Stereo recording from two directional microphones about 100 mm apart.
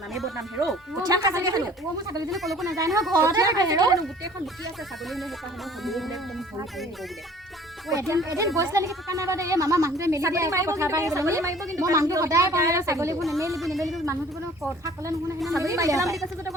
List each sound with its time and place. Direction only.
1.0 s a woman's voice: 40° right (ahead or behind)
2.3 s speech: centre (ahead or behind)
2.6 s a woman's voice: 35° right (ahead or behind)
5.8 s speech: centre (ahead or behind)
7.9 s a woman's voice: 30° right (ahead or behind)
13.6 s speech: centre (ahead or behind)
15.4 s a woman's voice: 30° right (ahead or behind)